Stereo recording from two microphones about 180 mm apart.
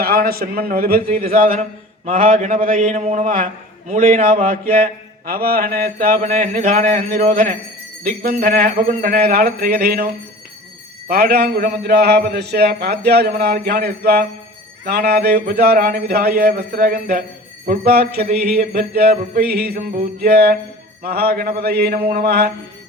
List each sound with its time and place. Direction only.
0.0 s a man's voice: 55° right (ahead or behind)
11.1 s a man's voice: 60° right (ahead or behind)